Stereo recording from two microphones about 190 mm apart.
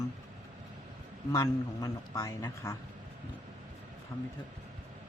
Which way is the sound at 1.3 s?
20° left (ahead or behind).